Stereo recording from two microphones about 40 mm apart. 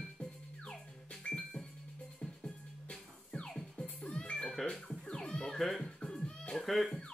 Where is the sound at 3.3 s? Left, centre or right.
Centre.